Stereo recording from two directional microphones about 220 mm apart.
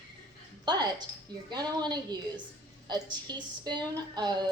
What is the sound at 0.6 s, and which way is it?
A woman's voice, 20° right (ahead or behind).